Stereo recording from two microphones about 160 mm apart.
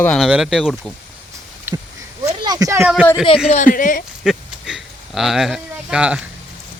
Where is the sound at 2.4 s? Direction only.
25° right (ahead or behind).